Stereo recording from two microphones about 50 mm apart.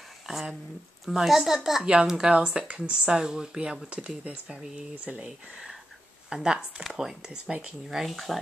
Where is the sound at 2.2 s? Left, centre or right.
Centre.